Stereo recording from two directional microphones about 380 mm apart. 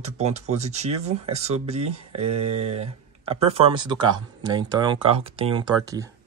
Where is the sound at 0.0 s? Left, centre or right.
Centre.